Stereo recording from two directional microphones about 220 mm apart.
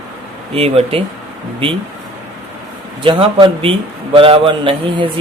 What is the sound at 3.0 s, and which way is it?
Speech, 25° right (ahead or behind).